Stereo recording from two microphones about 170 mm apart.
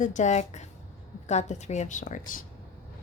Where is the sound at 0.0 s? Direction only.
45° left (ahead or behind).